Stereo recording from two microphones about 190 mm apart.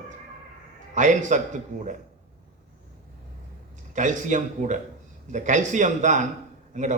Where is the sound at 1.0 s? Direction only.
40° right (ahead or behind).